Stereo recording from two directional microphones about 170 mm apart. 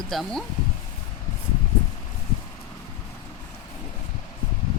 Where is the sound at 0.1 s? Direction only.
Centre (ahead or behind).